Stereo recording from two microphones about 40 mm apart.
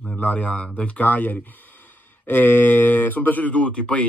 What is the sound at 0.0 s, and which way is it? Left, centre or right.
Speech, left.